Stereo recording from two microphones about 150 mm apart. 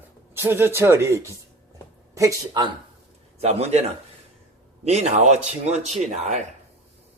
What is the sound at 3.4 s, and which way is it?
Speech, 45° right (ahead or behind).